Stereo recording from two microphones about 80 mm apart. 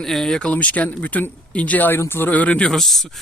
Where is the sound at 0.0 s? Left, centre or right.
Centre.